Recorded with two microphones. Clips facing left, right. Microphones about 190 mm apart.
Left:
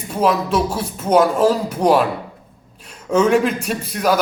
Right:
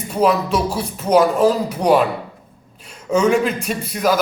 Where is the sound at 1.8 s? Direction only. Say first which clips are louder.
Even; 10° left (ahead or behind).